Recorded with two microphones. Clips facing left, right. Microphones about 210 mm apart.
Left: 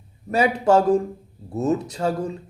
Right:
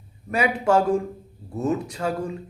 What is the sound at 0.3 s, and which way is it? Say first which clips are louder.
A woman's voice: left 3 dB; 30° left (ahead or behind).